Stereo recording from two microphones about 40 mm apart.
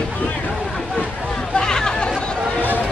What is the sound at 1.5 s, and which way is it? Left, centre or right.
Music, centre.